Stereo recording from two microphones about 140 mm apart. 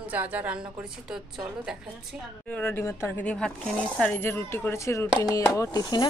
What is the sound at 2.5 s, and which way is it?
Speech, 15° left (ahead or behind).